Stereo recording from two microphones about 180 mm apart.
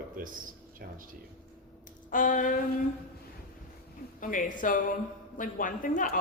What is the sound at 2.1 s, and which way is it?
Speech, 45° left (ahead or behind).